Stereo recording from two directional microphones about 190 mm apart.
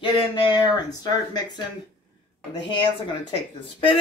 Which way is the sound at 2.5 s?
25° left (ahead or behind).